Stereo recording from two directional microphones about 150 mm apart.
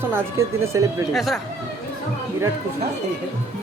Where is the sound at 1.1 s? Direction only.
Centre (ahead or behind).